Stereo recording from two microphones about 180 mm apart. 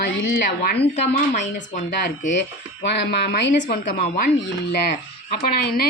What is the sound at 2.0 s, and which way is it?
Speech, 75° left (ahead or behind).